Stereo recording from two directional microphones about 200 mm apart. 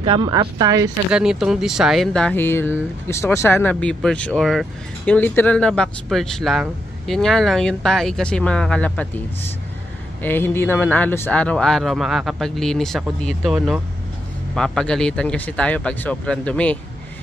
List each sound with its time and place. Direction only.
0.0 s speech: 25° right (ahead or behind)
1.1 s speech: 5° right (ahead or behind)
10.2 s speech: 10° left (ahead or behind)